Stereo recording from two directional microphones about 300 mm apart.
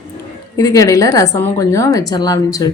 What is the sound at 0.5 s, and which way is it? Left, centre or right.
A woman's voice, centre.